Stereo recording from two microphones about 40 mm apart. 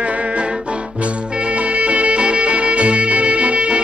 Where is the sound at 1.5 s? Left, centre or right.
Right.